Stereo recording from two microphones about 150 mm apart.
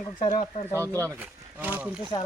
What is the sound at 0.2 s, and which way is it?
Speech, 30° left (ahead or behind).